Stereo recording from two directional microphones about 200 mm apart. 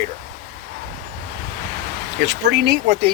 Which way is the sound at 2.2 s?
60° right (ahead or behind).